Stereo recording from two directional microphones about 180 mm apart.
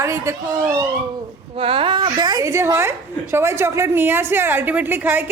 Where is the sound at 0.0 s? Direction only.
15° right (ahead or behind).